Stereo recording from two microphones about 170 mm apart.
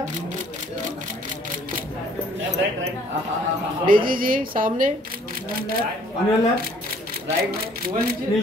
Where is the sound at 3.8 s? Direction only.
55° right (ahead or behind).